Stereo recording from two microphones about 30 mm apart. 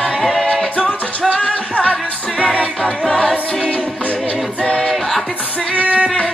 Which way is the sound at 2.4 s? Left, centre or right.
Left.